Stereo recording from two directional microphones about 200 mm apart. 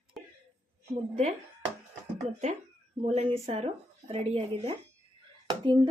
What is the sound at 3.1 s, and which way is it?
Speech, 30° right (ahead or behind).